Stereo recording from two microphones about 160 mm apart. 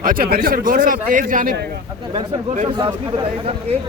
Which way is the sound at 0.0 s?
65° right (ahead or behind).